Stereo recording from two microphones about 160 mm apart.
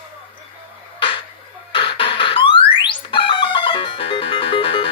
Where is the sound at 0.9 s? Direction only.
30° left (ahead or behind).